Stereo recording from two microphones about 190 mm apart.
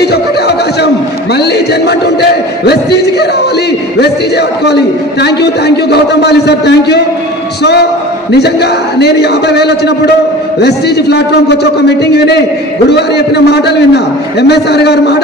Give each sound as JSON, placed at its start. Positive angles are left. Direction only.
{"t": 0.0, "sound": "a sound", "side_deg": 60}
{"t": 4.0, "sound": "a man's voice", "side_deg": 60}
{"t": 8.3, "sound": "a man's voice", "side_deg": 60}